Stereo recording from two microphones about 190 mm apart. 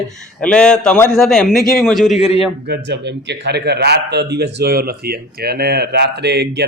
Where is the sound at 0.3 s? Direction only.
5° left (ahead or behind).